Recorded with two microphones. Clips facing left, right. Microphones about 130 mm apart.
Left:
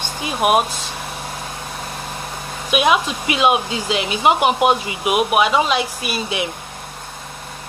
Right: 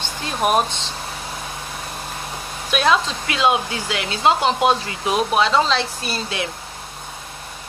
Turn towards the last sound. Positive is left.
turn(degrees=15)  # may be behind; listen again after turning